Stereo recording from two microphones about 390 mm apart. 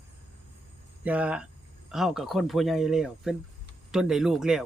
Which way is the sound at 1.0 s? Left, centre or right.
Centre.